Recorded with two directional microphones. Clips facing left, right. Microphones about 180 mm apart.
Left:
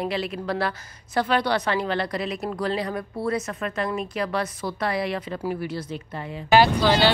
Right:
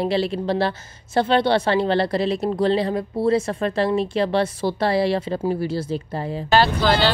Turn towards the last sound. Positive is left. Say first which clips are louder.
# even
turn(degrees=15)  # may be behind; listen again after turning